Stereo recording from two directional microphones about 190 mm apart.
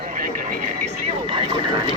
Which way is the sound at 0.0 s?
45° right (ahead or behind).